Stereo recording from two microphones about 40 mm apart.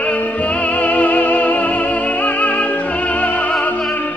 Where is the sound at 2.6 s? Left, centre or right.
Left.